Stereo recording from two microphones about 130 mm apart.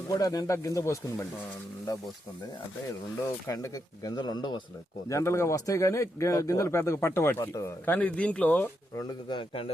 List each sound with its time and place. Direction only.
0.1 s speech: 30° left (ahead or behind)
3.2 s speech: 20° left (ahead or behind)
5.0 s speech: 20° left (ahead or behind)
7.9 s speech: 10° left (ahead or behind)
9.0 s a man's voice: 40° left (ahead or behind)